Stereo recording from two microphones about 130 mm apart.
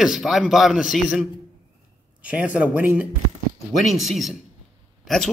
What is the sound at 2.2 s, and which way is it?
A man's voice, 10° right (ahead or behind).